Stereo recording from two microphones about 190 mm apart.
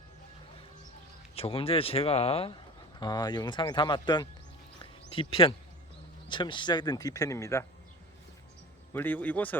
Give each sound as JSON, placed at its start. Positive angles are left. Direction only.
{"t": 1.4, "sound": "speech", "side_deg": 30}
{"t": 8.9, "sound": "a man's voice", "side_deg": 10}